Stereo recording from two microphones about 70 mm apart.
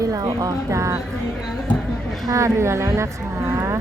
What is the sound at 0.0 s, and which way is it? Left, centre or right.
A woman's voice, right.